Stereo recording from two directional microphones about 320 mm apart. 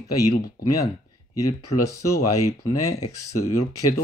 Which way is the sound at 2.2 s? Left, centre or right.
Left.